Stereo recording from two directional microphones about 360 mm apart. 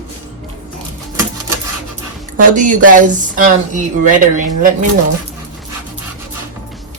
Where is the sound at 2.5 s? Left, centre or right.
Right.